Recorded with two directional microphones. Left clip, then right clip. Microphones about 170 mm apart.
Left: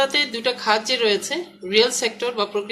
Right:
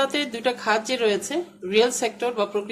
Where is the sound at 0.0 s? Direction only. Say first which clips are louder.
Left 3 dB; 65° right (ahead or behind).